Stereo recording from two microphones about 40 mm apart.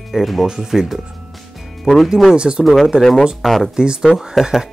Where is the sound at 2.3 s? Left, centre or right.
Right.